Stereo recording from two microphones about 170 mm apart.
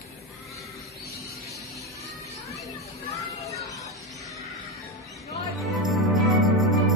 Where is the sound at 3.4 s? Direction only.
20° left (ahead or behind).